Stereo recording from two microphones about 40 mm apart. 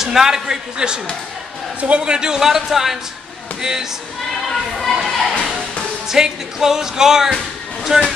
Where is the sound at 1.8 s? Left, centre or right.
Right.